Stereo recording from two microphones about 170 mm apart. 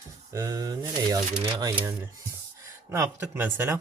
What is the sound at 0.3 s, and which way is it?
Speech, 20° right (ahead or behind).